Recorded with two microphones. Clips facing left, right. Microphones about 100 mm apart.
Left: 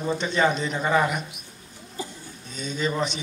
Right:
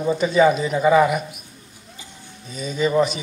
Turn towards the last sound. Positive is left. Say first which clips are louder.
# right 7 dB
turn(degrees=-5)  # may be behind; listen again after turning